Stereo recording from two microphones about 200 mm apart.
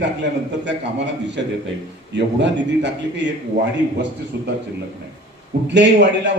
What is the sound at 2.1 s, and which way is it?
A man's voice, 60° right (ahead or behind).